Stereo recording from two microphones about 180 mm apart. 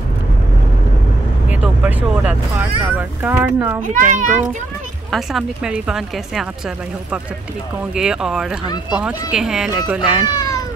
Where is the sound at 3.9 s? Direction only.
45° right (ahead or behind).